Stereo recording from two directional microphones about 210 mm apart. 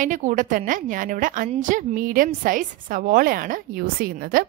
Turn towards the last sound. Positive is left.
turn(degrees=-45)  # may be behind; listen again after turning